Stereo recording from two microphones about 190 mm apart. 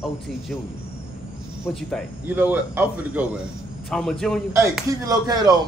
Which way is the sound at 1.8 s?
5° left (ahead or behind).